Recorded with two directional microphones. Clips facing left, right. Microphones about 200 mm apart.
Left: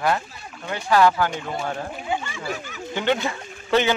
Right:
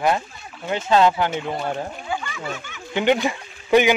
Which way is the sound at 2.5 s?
35° left (ahead or behind).